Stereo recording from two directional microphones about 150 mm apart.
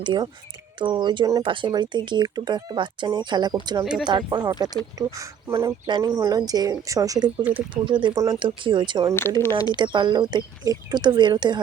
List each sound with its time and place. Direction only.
0.0 s speech: 30° right (ahead or behind)
9.4 s speech: 20° left (ahead or behind)
9.7 s speech: 30° right (ahead or behind)